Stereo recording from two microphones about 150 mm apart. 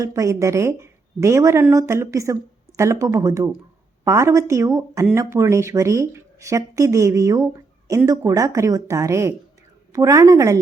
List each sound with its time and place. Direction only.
0.0 s speech: 20° right (ahead or behind)